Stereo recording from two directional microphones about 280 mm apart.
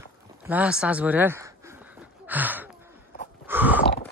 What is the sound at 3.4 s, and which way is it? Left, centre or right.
Chewing, centre.